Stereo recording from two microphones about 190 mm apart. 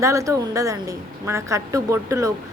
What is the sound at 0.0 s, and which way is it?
Speech, 15° right (ahead or behind).